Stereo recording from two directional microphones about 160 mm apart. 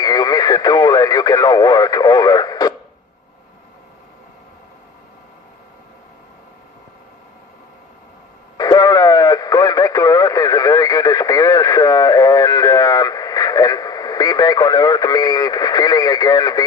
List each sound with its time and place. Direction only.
0.0 s speech: 25° left (ahead or behind)
8.5 s radio: 25° left (ahead or behind)